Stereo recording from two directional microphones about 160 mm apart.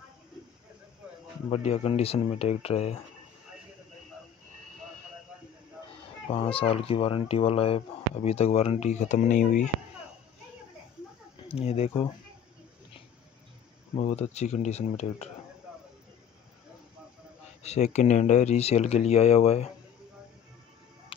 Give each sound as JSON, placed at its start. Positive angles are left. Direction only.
{"t": 1.5, "sound": "speech", "side_deg": 40}
{"t": 6.2, "sound": "speech", "side_deg": 35}
{"t": 11.4, "sound": "speech", "side_deg": 40}
{"t": 13.9, "sound": "speech", "side_deg": 45}
{"t": 17.6, "sound": "speech", "side_deg": 45}